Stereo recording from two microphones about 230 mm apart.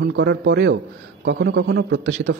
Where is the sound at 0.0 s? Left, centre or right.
Right.